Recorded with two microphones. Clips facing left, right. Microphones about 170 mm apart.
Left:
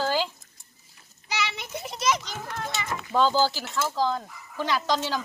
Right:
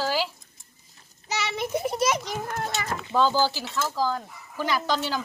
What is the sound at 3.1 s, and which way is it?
Speech, centre (ahead or behind).